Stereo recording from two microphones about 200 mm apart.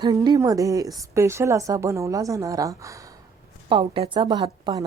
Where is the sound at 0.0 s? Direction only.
20° right (ahead or behind).